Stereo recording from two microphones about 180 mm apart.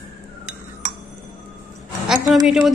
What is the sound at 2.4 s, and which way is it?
Speech, centre (ahead or behind).